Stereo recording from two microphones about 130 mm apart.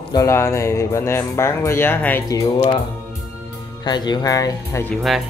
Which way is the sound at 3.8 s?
35° left (ahead or behind).